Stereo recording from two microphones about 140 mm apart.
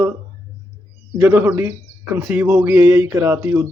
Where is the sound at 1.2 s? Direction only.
15° right (ahead or behind).